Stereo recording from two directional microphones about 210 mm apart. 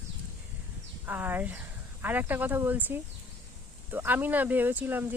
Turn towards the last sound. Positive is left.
turn(degrees=-10)  # may be behind; listen again after turning